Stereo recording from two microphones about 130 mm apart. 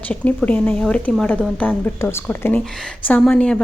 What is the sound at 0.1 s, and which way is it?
A woman's voice, 10° left (ahead or behind).